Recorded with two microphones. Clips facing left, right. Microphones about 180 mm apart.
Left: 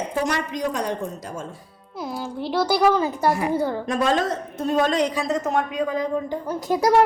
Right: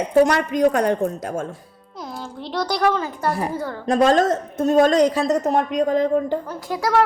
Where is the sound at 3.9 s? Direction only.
45° right (ahead or behind).